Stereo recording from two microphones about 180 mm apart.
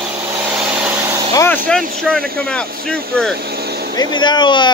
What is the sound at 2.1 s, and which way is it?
Speech, 5° left (ahead or behind).